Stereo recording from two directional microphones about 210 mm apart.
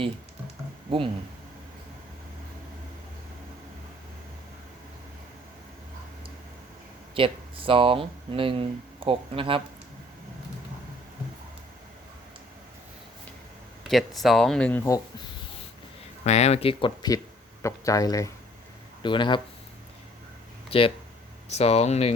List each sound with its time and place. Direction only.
0.9 s speech: 25° right (ahead or behind)
7.1 s speech: 25° right (ahead or behind)
13.8 s speech: centre (ahead or behind)
16.2 s speech: 30° left (ahead or behind)
20.7 s speech: 25° left (ahead or behind)